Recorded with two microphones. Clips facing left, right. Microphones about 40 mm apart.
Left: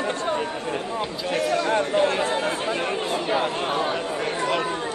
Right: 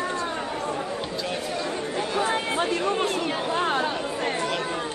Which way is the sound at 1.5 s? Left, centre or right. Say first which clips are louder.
Left 7 dB; left.